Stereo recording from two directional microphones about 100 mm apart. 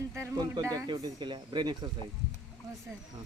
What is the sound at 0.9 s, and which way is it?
Speech, 50° right (ahead or behind).